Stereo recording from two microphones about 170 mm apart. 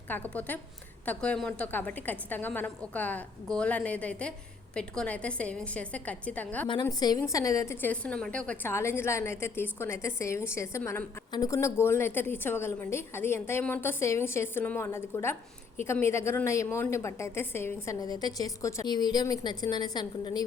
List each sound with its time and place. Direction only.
0.1 s a woman's voice: 10° left (ahead or behind)
6.8 s a woman's voice: 20° left (ahead or behind)